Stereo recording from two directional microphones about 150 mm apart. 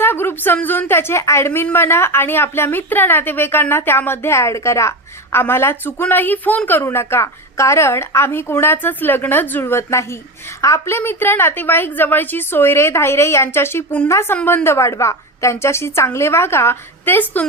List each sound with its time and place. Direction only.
0.0 s a woman's voice: 15° left (ahead or behind)